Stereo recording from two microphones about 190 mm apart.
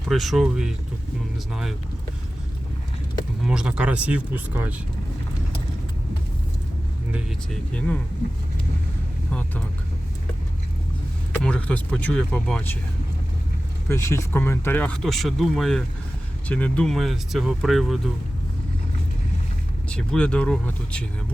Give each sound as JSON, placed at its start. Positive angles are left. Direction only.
{"t": 0.1, "sound": "speech", "side_deg": 0}
{"t": 3.4, "sound": "speech", "side_deg": -5}
{"t": 7.7, "sound": "speech", "side_deg": 5}
{"t": 11.4, "sound": "speech", "side_deg": 5}
{"t": 13.8, "sound": "speech", "side_deg": 15}
{"t": 19.9, "sound": "speech", "side_deg": 5}